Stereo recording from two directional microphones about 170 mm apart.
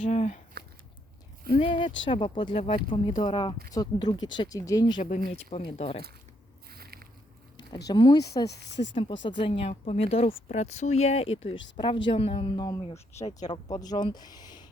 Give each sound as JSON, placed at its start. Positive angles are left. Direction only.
{"t": 0.0, "sound": "speech", "side_deg": 40}
{"t": 1.5, "sound": "speech", "side_deg": 30}
{"t": 5.0, "sound": "speech", "side_deg": 45}
{"t": 5.5, "sound": "speech", "side_deg": 35}
{"t": 6.7, "sound": "a sound", "side_deg": -65}
{"t": 7.9, "sound": "speech", "side_deg": 25}
{"t": 8.4, "sound": "speech", "side_deg": 85}
{"t": 9.2, "sound": "speech", "side_deg": 30}